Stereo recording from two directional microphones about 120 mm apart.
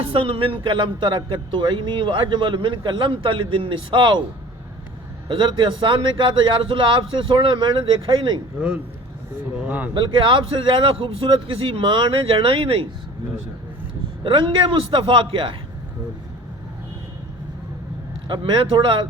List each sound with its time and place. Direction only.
0.0 s speech: 50° right (ahead or behind)
5.3 s speech: 45° right (ahead or behind)
9.6 s speech: 15° right (ahead or behind)
9.9 s speech: 40° right (ahead or behind)
14.3 s speech: 45° right (ahead or behind)
18.3 s speech: 40° right (ahead or behind)